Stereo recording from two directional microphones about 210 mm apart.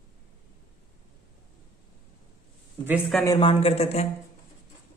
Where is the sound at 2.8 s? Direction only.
5° right (ahead or behind).